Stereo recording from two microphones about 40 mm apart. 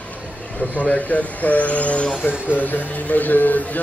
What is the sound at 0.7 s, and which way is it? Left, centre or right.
Speech, left.